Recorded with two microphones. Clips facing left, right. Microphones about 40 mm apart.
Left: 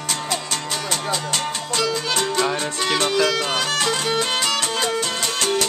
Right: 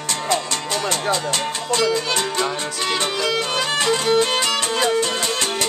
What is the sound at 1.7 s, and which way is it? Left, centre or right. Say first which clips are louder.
Music: right 3 dB; centre.